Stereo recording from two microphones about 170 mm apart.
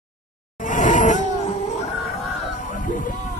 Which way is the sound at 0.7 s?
45° left (ahead or behind).